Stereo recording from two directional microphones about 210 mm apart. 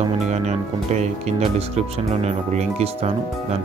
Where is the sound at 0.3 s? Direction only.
30° right (ahead or behind).